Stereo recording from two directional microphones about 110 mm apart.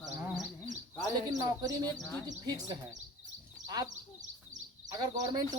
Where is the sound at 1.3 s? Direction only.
30° right (ahead or behind).